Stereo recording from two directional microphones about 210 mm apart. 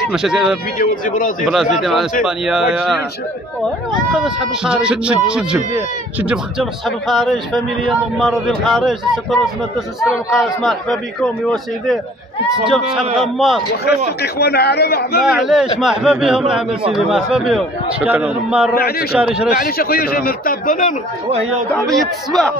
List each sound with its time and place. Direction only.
0.1 s a man's voice: centre (ahead or behind)
0.7 s speech: 40° left (ahead or behind)
1.4 s a man's voice: centre (ahead or behind)
4.1 s a man's voice: 5° right (ahead or behind)
10.3 s a man's voice: centre (ahead or behind)
13.8 s speech: 50° left (ahead or behind)
15.2 s a man's voice: centre (ahead or behind)
18.8 s speech: 45° left (ahead or behind)
19.1 s a man's voice: 5° right (ahead or behind)
19.5 s speech: 45° left (ahead or behind)
21.8 s a man's voice: centre (ahead or behind)